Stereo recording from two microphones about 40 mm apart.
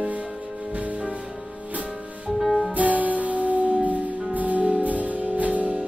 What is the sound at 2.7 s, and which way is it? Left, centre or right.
Music, right.